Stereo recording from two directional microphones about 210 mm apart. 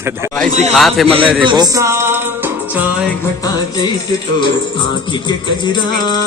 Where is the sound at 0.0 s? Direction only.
10° right (ahead or behind).